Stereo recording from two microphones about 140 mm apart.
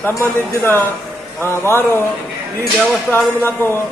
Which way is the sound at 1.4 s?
15° left (ahead or behind).